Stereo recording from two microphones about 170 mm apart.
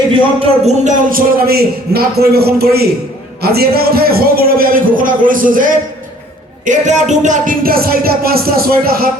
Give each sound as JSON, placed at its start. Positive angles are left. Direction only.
{"t": 0.3, "sound": "speech", "side_deg": -40}
{"t": 1.1, "sound": "a man's voice", "side_deg": -65}
{"t": 3.4, "sound": "music", "side_deg": -65}